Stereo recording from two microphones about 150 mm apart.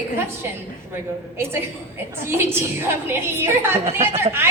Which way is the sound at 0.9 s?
15° right (ahead or behind).